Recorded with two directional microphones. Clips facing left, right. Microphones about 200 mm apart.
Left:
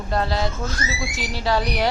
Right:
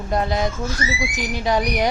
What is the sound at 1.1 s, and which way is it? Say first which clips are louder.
Speech: even; 15° right (ahead or behind).